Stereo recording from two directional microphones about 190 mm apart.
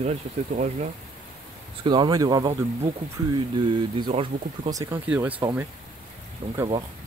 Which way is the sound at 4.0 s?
30° right (ahead or behind).